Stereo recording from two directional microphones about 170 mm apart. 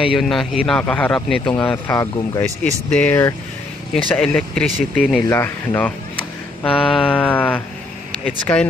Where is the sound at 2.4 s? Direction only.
40° right (ahead or behind).